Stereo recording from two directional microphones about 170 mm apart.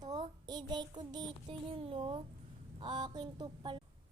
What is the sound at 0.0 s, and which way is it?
Child singing, 25° right (ahead or behind).